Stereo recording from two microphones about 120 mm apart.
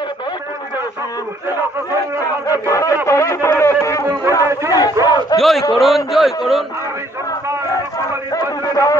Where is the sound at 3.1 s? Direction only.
25° left (ahead or behind).